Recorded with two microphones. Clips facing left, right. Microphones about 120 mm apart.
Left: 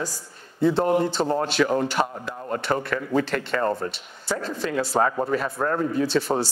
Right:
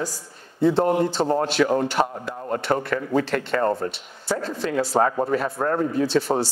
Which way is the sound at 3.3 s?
45° right (ahead or behind).